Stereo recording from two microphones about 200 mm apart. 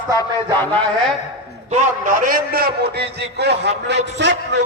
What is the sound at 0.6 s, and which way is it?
Speech, 5° left (ahead or behind).